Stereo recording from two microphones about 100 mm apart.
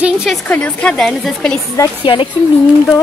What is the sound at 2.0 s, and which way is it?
Speech, 55° left (ahead or behind).